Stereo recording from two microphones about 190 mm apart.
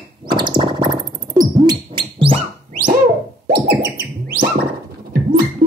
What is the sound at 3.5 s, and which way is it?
Music, 55° right (ahead or behind).